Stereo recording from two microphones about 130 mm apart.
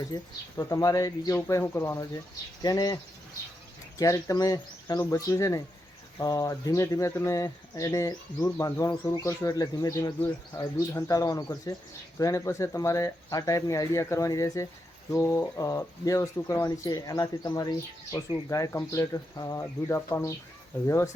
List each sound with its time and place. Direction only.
0.1 s speech: 30° left (ahead or behind)
10.2 s speech: 15° left (ahead or behind)
10.6 s speech: 25° left (ahead or behind)